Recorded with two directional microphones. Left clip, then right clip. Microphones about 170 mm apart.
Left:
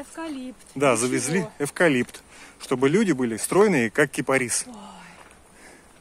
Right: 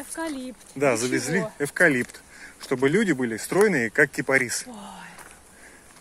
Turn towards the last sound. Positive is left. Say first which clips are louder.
# right 2 dB
turn(degrees=5)  # may be behind; listen again after turning